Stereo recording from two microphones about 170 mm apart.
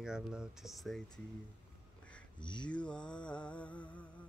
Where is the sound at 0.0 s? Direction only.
5° right (ahead or behind).